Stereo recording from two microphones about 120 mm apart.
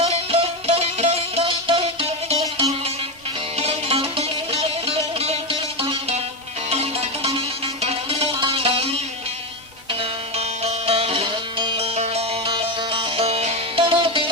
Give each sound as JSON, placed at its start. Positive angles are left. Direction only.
{"t": 0.0, "sound": "music", "side_deg": -55}
{"t": 6.7, "sound": "music", "side_deg": -60}
{"t": 10.0, "sound": "music", "side_deg": -60}
{"t": 11.9, "sound": "music", "side_deg": -60}
{"t": 13.8, "sound": "music", "side_deg": -45}